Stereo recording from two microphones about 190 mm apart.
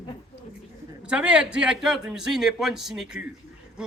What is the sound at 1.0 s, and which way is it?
A man's voice, 5° right (ahead or behind).